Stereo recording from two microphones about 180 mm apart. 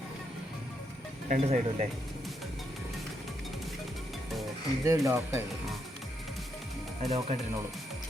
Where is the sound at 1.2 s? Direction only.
45° right (ahead or behind).